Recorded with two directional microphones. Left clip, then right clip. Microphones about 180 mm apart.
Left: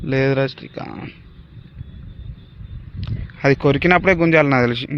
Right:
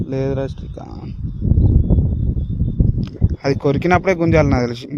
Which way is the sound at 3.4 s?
20° right (ahead or behind).